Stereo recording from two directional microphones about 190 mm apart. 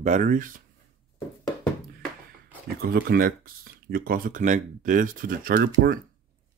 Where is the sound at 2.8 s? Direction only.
50° right (ahead or behind).